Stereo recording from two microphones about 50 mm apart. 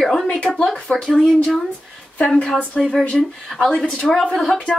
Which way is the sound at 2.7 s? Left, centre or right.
Centre.